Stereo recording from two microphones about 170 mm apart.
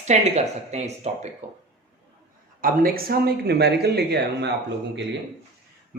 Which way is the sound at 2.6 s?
60° right (ahead or behind).